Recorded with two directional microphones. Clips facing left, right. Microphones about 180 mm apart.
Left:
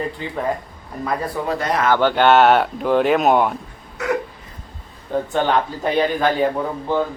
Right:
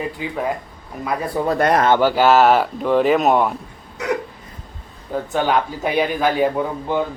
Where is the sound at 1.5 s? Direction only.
60° right (ahead or behind).